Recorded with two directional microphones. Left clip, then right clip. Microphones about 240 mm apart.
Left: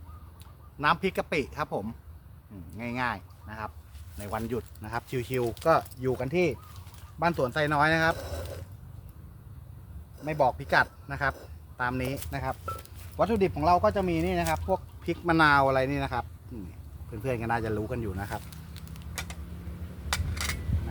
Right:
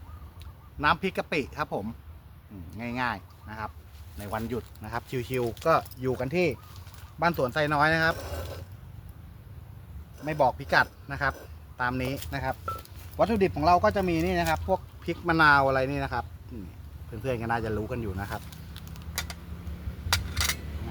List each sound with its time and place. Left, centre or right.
0.8 s speech: centre
8.2 s speech: centre
10.2 s speech: centre
15.0 s speech: centre
17.2 s speech: centre
18.3 s fire: centre
19.1 s vehicle: right
20.1 s a sound: right